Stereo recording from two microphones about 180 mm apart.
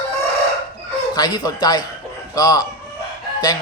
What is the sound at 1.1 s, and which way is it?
Speech, 20° left (ahead or behind).